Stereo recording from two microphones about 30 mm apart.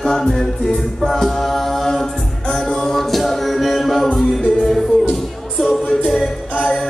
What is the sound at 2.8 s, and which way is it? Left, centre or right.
Music, centre.